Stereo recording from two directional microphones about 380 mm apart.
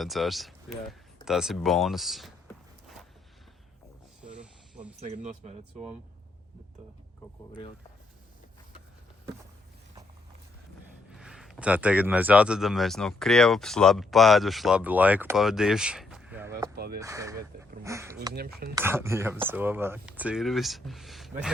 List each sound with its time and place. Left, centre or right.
0.0 s speech: centre
4.2 s snake: centre
4.9 s speech: centre
11.1 s speech: centre
16.7 s a sound: right
17.0 s speech: centre